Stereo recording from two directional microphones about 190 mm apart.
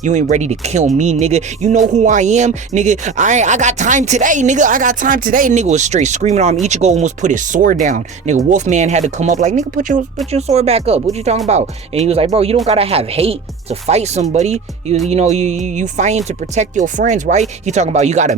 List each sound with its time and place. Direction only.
0.0 s speech: 40° right (ahead or behind)